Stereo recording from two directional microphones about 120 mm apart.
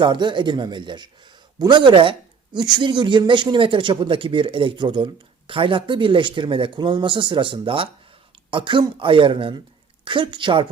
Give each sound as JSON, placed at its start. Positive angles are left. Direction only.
{"t": 0.0, "sound": "speech", "side_deg": -40}